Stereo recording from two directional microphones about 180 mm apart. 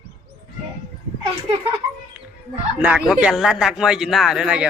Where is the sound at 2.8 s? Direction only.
5° right (ahead or behind).